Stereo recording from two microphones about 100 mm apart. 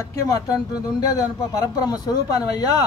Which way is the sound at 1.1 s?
35° left (ahead or behind).